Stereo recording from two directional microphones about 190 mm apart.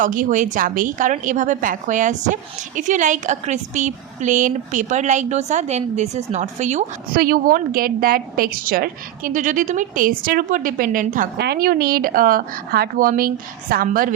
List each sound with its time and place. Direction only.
0.0 s a woman's voice: 45° right (ahead or behind)
7.2 s a woman's voice: 50° right (ahead or behind)
11.3 s a woman's voice: 55° right (ahead or behind)